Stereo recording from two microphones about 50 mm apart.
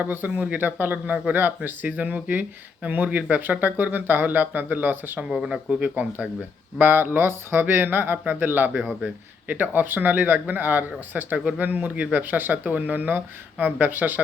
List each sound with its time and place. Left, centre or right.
0.0 s speech: right
5.3 s speech: centre
5.8 s speech: right
11.3 s speech: right
11.6 s speech: right